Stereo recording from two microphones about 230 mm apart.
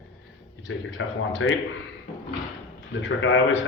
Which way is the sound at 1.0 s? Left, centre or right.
Left.